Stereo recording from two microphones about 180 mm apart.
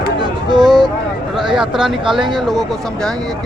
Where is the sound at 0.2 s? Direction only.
25° right (ahead or behind).